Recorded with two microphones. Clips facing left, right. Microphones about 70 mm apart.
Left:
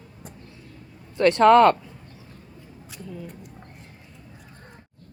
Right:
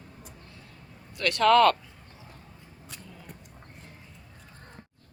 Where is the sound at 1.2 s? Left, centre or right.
Left.